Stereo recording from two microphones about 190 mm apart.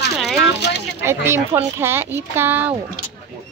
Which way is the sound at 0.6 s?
60° left (ahead or behind).